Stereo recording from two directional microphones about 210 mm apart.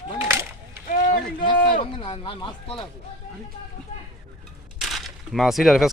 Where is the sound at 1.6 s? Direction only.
40° left (ahead or behind).